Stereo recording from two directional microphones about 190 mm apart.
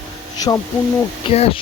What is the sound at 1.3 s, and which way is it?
Speech, 30° left (ahead or behind).